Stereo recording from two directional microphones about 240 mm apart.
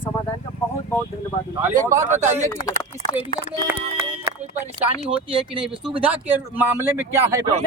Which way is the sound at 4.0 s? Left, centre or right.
Right.